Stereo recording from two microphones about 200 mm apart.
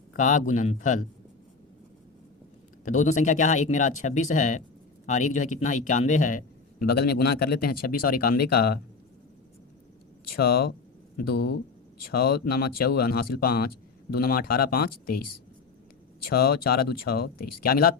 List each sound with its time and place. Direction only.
0.1 s speech: 40° left (ahead or behind)
2.8 s speech: 35° left (ahead or behind)
10.3 s speech: 50° left (ahead or behind)